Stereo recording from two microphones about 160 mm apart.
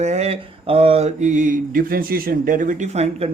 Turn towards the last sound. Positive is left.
turn(degrees=-40)  # may be behind; listen again after turning